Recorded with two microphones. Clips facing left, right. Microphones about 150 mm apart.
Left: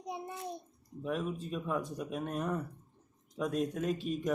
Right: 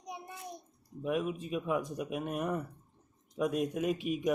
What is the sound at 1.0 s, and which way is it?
Speech, 10° right (ahead or behind).